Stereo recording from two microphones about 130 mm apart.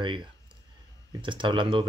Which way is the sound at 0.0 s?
40° right (ahead or behind).